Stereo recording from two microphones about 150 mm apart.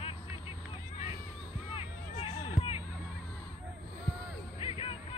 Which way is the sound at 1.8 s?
35° left (ahead or behind).